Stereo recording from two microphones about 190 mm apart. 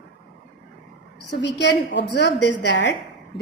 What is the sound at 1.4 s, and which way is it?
A woman's voice, 65° left (ahead or behind).